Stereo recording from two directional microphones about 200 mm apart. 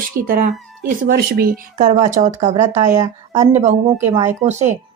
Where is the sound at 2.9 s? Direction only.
15° right (ahead or behind).